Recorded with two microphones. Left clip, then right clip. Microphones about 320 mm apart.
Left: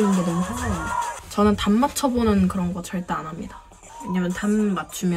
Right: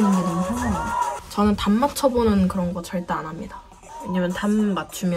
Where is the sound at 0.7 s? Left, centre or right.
Centre.